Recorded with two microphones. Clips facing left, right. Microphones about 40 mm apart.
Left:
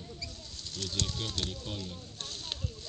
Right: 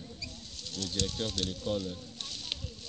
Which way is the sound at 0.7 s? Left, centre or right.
Left.